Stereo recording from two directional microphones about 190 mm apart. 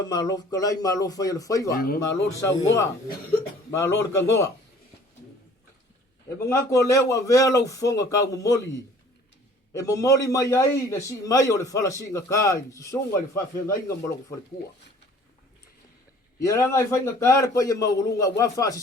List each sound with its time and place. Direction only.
0.1 s speech: 20° left (ahead or behind)
1.7 s speech: 50° left (ahead or behind)
2.0 s a man's voice: 15° left (ahead or behind)
6.4 s a man's voice: 15° left (ahead or behind)
9.7 s a man's voice: 15° left (ahead or behind)
16.4 s a man's voice: 15° left (ahead or behind)